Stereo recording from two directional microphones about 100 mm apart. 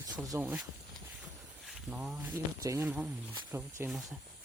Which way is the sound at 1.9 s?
15° right (ahead or behind).